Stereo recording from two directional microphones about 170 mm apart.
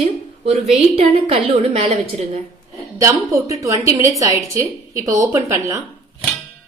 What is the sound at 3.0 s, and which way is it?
A woman's voice, 15° right (ahead or behind).